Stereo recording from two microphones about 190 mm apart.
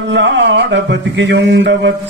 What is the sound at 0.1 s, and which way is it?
A man's voice, 70° right (ahead or behind).